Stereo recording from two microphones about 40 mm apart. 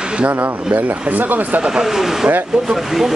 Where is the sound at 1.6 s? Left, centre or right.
Centre.